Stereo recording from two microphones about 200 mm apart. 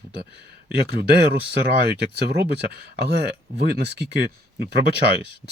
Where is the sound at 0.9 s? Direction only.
55° right (ahead or behind).